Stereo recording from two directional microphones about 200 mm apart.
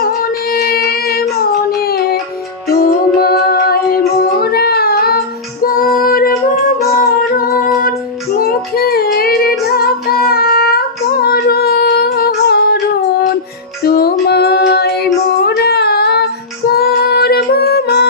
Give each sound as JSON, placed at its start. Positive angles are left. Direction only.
{"t": 0.0, "sound": "music", "side_deg": 50}
{"t": 0.8, "sound": "child singing", "side_deg": 50}
{"t": 2.7, "sound": "child singing", "side_deg": 50}
{"t": 7.0, "sound": "music", "side_deg": 45}
{"t": 8.4, "sound": "child singing", "side_deg": 50}
{"t": 13.8, "sound": "music", "side_deg": 50}
{"t": 15.4, "sound": "female singing", "side_deg": 55}